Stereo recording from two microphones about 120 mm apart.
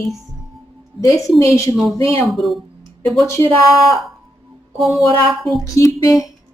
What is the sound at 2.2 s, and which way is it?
Speech, centre (ahead or behind).